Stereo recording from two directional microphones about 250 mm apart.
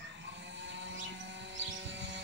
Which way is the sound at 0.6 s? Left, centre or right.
Right.